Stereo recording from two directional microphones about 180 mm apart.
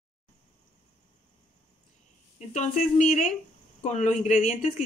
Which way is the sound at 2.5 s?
40° left (ahead or behind).